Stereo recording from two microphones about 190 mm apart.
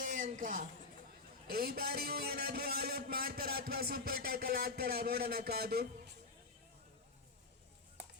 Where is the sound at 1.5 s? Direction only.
55° right (ahead or behind).